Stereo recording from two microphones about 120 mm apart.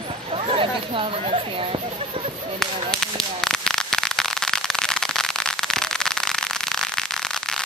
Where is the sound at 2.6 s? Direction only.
5° left (ahead or behind).